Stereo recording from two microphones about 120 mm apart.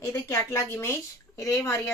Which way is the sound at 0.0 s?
20° left (ahead or behind).